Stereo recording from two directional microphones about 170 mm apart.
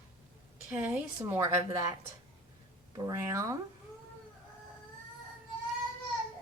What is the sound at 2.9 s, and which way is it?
Speech, 20° right (ahead or behind).